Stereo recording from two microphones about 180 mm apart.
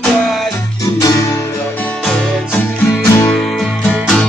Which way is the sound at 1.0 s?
15° left (ahead or behind).